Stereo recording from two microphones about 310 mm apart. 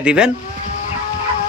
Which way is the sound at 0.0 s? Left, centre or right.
Centre.